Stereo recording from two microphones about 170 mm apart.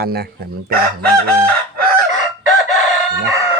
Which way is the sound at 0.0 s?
65° right (ahead or behind).